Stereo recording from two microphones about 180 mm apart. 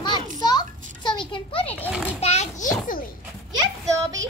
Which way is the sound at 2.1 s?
35° left (ahead or behind).